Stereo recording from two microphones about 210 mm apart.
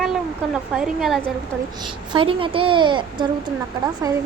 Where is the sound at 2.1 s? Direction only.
25° right (ahead or behind).